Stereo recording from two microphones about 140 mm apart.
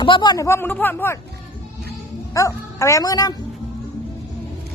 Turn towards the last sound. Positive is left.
turn(degrees=25)  # may be behind; listen again after turning